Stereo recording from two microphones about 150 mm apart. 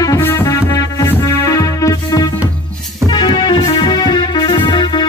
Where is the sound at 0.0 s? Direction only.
20° left (ahead or behind).